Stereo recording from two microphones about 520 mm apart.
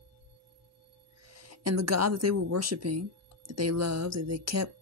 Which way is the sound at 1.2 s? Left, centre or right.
Right.